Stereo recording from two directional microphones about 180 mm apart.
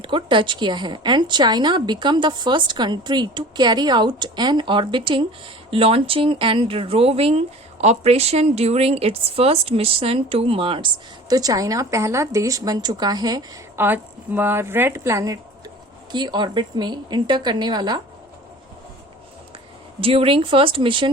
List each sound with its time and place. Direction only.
0.0 s speech: 25° right (ahead or behind)
13.8 s a woman's voice: 10° right (ahead or behind)
20.0 s speech: 30° right (ahead or behind)